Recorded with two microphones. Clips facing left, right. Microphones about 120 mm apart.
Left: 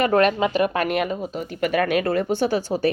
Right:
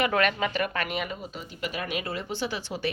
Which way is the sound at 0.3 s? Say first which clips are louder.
Left 8 dB; 10° left (ahead or behind).